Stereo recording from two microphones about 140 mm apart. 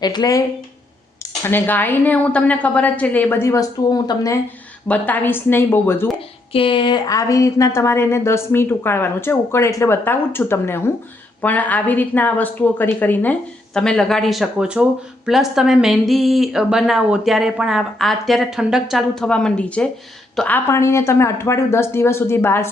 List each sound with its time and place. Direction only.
0.0 s a woman's voice: 30° left (ahead or behind)
1.5 s a woman's voice: 15° left (ahead or behind)
4.9 s a woman's voice: 10° left (ahead or behind)
6.5 s a woman's voice: 40° left (ahead or behind); by 20.6 s 5° left (ahead or behind)
20.7 s a woman's voice: 20° left (ahead or behind)